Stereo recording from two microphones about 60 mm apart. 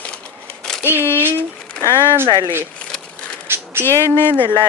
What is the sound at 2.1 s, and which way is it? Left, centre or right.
Speech, right.